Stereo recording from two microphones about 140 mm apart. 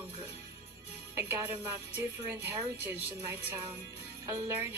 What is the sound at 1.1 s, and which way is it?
A woman's voice, 15° right (ahead or behind).